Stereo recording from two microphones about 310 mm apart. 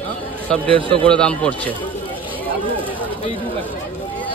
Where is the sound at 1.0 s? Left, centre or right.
Centre.